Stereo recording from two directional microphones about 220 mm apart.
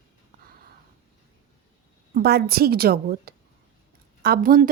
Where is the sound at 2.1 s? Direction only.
45° right (ahead or behind).